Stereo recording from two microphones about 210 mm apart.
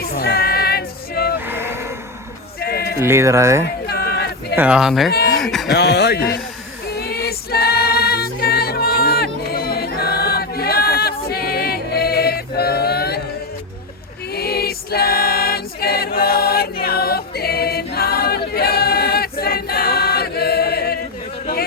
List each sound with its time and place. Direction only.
0.0 s female singing: 45° left (ahead or behind)
1.5 s vehicle: 10° right (ahead or behind)
2.6 s music: 50° left (ahead or behind)
3.0 s speech: 10° right (ahead or behind)
3.8 s a sound: 50° left (ahead or behind)
4.5 s speech: 5° right (ahead or behind)
5.1 s a sound: 50° left (ahead or behind)
5.4 s a sound: centre (ahead or behind)
5.7 s speech: 50° left (ahead or behind)
6.9 s music: 50° left (ahead or behind)
14.3 s music: 45° left (ahead or behind)
16.8 s choir: 45° left (ahead or behind)